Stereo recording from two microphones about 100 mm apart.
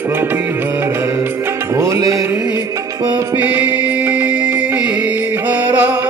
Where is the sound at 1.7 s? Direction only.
30° right (ahead or behind).